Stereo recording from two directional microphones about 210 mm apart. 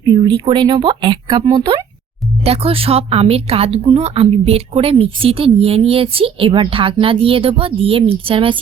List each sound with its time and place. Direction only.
0.0 s speech: 25° right (ahead or behind)